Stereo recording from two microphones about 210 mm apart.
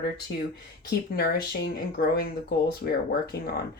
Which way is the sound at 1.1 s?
50° left (ahead or behind).